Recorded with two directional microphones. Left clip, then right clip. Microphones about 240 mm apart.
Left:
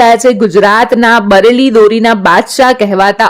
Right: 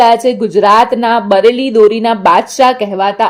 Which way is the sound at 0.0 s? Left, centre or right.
Left.